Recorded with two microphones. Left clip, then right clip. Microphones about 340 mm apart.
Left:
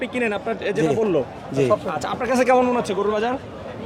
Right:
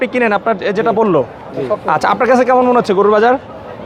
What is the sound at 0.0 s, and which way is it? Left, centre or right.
Speech, right.